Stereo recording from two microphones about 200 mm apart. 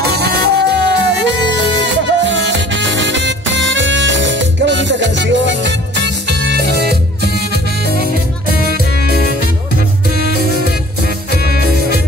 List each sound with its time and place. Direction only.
0.2 s music: 55° right (ahead or behind)
8.9 s music: 50° left (ahead or behind)
11.3 s music: 50° left (ahead or behind)